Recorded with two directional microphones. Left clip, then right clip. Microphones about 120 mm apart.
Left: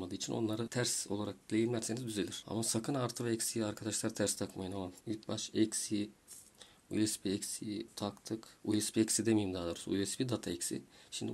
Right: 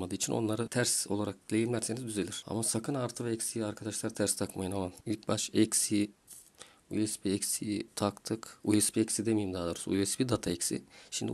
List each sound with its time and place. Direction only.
0.0 s speech: 60° right (ahead or behind)
0.4 s speech: 45° right (ahead or behind); by 4.2 s 25° right (ahead or behind)
4.2 s speech: 35° right (ahead or behind)
4.6 s speech: 55° right (ahead or behind)
6.9 s speech: 25° right (ahead or behind)
7.2 s speech: 55° right (ahead or behind)
8.9 s speech: 25° right (ahead or behind)
9.5 s speech: 40° right (ahead or behind)